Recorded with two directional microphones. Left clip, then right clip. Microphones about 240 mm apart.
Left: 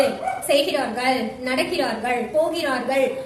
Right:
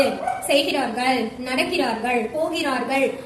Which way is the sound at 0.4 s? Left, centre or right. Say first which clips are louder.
Left 1 dB; centre.